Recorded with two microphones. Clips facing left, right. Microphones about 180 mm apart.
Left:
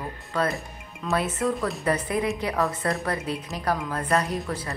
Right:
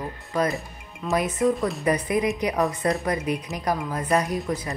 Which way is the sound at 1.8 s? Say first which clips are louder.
Right 2 dB; 15° right (ahead or behind).